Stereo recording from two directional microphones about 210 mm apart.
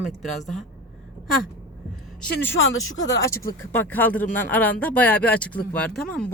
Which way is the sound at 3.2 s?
15° left (ahead or behind).